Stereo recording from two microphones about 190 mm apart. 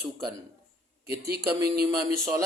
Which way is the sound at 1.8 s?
20° right (ahead or behind).